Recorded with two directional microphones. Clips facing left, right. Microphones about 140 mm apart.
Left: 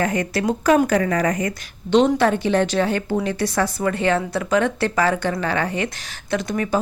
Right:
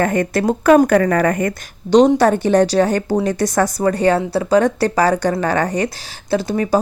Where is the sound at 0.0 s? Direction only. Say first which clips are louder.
Right 5 dB; 50° right (ahead or behind).